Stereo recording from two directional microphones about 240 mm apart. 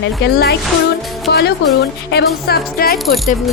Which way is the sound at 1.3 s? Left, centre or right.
Left.